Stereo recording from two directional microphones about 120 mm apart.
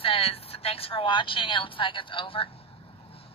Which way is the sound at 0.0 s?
50° left (ahead or behind).